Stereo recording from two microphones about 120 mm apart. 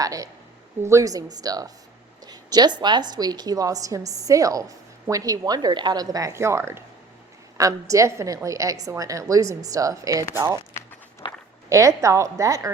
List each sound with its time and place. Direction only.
0.0 s a woman's voice: 30° right (ahead or behind)
11.2 s a sound: 45° left (ahead or behind)
11.7 s a woman's voice: 25° right (ahead or behind)